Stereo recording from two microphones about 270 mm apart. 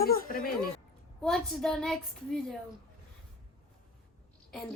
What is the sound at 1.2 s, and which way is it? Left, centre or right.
A woman's voice, centre.